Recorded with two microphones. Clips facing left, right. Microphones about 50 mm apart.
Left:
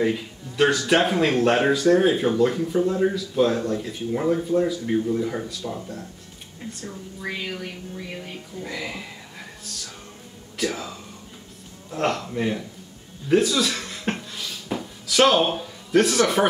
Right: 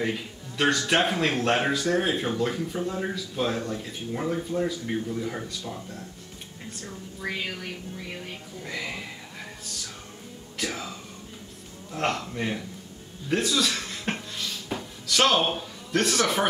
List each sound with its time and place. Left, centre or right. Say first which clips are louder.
0.0 s speech: left 6 dB; centre
6.7 s speech: left 3 dB; centre
10.6 s speech: left 5 dB; centre
13.3 s a sound: left 5 dB; centre